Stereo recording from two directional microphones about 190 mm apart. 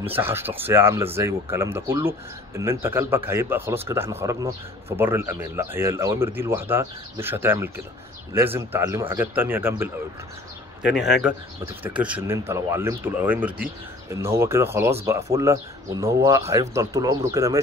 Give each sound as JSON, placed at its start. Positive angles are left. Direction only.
{"t": 0.1, "sound": "speech", "side_deg": -10}
{"t": 10.9, "sound": "a man's voice", "side_deg": 0}